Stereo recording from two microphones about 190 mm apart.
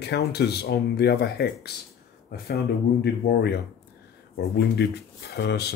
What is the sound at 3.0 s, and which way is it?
Speech, 60° left (ahead or behind).